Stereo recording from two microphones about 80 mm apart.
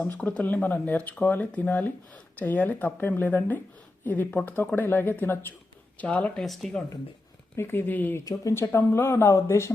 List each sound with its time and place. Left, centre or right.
0.0 s speech: centre
6.4 s speech: centre
7.5 s speech: left
8.2 s speech: left
8.7 s speech: left